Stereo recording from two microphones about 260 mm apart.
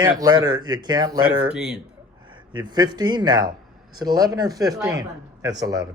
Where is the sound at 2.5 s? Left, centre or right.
Centre.